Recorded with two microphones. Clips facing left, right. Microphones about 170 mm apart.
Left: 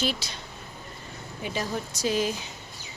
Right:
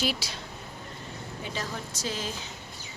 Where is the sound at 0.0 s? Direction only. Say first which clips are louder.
Left 1 dB; 10° right (ahead or behind).